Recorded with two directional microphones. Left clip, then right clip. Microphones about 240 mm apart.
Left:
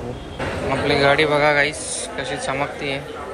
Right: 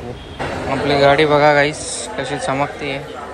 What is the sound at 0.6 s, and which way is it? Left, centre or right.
A man's voice, centre.